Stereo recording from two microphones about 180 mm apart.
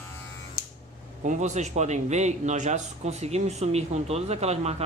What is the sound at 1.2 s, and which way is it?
A man's voice, 45° right (ahead or behind).